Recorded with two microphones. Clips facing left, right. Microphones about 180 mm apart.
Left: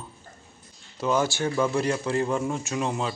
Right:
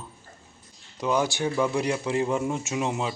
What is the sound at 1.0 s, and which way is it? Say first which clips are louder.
Speech: left 1 dB; 15° right (ahead or behind).